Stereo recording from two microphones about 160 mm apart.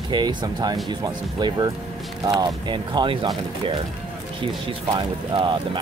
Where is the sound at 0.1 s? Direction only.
30° right (ahead or behind).